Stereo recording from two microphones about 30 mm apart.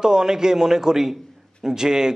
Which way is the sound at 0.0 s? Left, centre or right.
Right.